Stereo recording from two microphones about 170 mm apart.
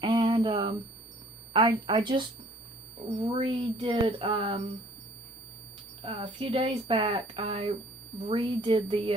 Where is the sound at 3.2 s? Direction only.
30° right (ahead or behind).